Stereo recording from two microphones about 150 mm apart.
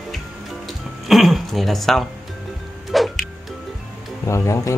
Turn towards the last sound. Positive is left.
turn(degrees=20)  # may be behind; listen again after turning